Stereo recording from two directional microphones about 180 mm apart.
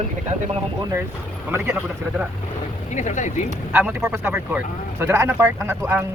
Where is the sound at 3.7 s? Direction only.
15° right (ahead or behind).